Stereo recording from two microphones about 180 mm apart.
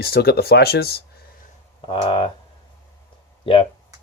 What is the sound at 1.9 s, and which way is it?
Speech, 30° left (ahead or behind).